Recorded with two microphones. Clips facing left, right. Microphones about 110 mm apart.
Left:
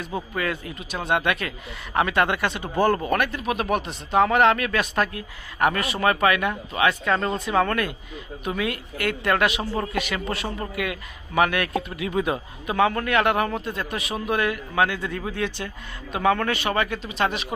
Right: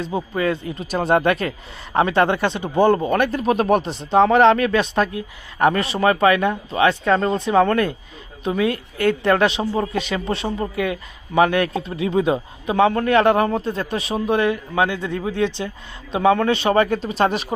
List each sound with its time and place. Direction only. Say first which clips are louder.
0.0 s speech: right 6 dB; 25° right (ahead or behind)
0.9 s speech: right 6 dB; 40° right (ahead or behind)
3.3 s speech: right 7 dB; 35° right (ahead or behind)